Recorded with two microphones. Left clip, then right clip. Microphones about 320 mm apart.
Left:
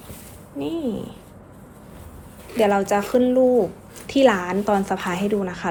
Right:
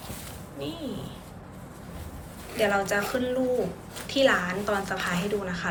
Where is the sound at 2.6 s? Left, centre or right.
Centre.